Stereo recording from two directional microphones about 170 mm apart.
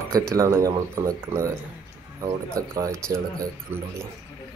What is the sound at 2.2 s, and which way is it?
Speech, 20° right (ahead or behind).